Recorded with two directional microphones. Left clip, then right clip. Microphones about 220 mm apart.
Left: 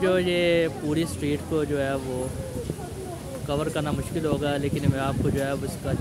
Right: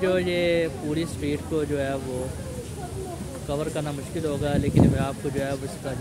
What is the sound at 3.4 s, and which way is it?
Speech, 15° left (ahead or behind).